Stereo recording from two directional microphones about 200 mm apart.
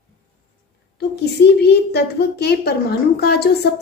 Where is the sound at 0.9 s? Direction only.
55° left (ahead or behind).